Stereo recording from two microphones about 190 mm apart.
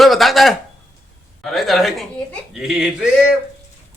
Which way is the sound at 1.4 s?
Centre (ahead or behind).